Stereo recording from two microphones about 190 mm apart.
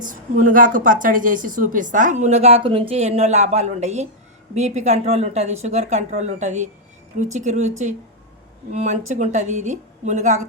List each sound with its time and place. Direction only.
0.0 s a woman's voice: 45° right (ahead or behind)
8.7 s speech: 35° right (ahead or behind)